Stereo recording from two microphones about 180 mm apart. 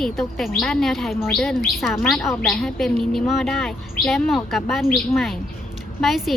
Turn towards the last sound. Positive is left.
turn(degrees=0)  # may be behind; listen again after turning